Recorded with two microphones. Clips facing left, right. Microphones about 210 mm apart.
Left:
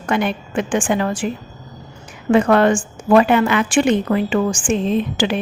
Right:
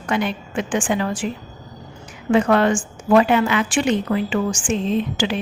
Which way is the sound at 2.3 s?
55° left (ahead or behind).